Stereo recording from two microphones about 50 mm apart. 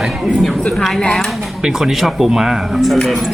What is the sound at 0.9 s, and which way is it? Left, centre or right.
Speech, centre.